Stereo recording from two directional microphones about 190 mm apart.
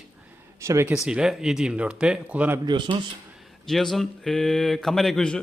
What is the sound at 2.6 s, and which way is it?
Speech, 25° right (ahead or behind).